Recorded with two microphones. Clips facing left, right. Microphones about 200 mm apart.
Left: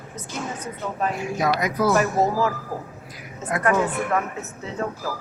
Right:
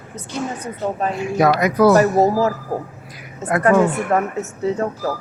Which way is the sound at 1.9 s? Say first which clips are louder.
Right 6 dB; 35° right (ahead or behind).